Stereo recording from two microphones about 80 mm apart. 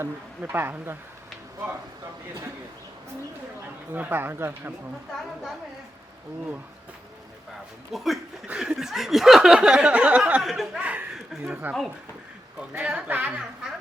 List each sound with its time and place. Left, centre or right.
0.0 s speech: right
3.9 s speech: right
7.9 s speech: centre
8.5 s a sound: centre
10.4 s speech: centre
10.8 s a sound: centre
11.6 s speech: right